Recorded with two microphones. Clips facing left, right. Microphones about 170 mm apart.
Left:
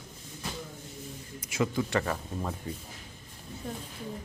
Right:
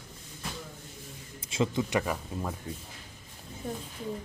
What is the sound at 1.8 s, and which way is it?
Speech, 10° right (ahead or behind).